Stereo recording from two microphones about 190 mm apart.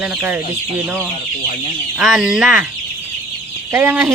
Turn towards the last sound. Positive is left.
turn(degrees=-5)  # may be behind; listen again after turning